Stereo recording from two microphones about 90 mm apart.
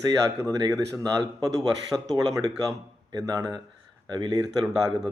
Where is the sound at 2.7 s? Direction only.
45° right (ahead or behind).